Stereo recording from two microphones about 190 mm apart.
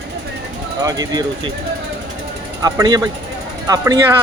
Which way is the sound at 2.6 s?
20° right (ahead or behind).